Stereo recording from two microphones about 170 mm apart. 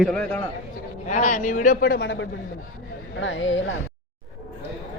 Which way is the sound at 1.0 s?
45° left (ahead or behind).